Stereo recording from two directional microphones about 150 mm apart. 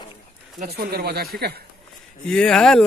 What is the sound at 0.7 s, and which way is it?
Speech, 90° right.